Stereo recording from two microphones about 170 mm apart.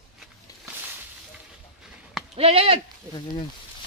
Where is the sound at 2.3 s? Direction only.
35° right (ahead or behind).